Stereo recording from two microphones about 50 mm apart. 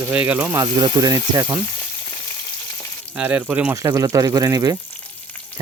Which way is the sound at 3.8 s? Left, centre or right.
Right.